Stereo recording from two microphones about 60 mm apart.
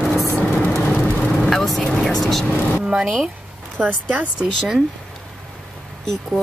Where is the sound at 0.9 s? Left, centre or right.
Left.